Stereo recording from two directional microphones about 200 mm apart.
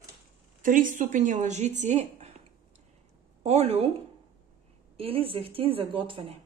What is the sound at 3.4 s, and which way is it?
Speech, 30° right (ahead or behind).